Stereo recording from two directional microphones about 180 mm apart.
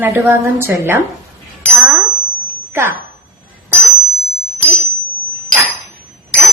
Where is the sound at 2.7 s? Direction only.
15° right (ahead or behind).